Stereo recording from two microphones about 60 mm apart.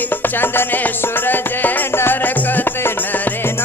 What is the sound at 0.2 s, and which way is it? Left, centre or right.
Music, left.